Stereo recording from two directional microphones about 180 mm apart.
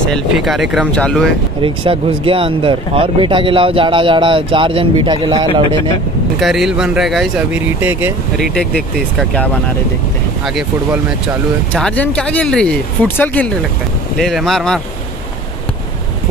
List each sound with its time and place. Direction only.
0.0 s speech: centre (ahead or behind)
1.6 s speech: 30° right (ahead or behind)
6.4 s speech: centre (ahead or behind)
8.4 s speech: 5° left (ahead or behind)
10.4 s speech: centre (ahead or behind)